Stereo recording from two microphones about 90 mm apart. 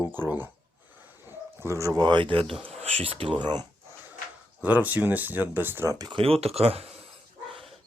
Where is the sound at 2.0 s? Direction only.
60° right (ahead or behind).